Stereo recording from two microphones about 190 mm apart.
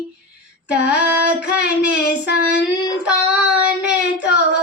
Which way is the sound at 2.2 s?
60° left (ahead or behind).